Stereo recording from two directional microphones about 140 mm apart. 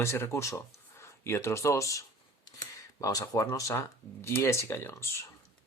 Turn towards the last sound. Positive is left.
turn(degrees=20)  # may be behind; listen again after turning